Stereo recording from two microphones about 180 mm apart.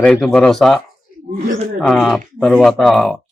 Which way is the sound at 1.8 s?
Centre (ahead or behind).